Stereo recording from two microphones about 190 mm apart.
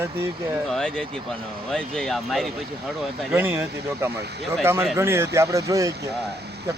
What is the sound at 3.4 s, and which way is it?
Speech, 10° right (ahead or behind).